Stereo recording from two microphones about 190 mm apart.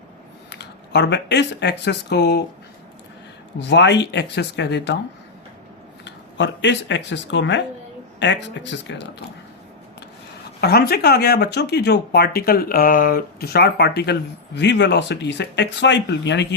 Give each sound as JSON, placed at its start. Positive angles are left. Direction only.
{"t": 0.5, "sound": "speech", "side_deg": 65}
{"t": 3.6, "sound": "speech", "side_deg": 65}
{"t": 6.1, "sound": "speech", "side_deg": 70}
{"t": 10.6, "sound": "speech", "side_deg": 55}